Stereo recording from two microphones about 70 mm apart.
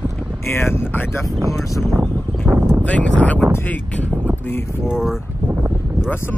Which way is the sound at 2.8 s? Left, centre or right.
Centre.